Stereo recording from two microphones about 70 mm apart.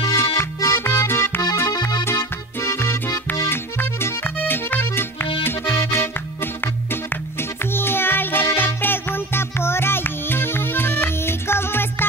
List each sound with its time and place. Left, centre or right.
0.1 s music: left
1.7 s accordion: left
2.6 s music: left
4.5 s accordion: left
7.7 s music: left